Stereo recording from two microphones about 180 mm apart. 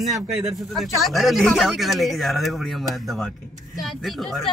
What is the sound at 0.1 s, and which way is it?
Speech, centre (ahead or behind).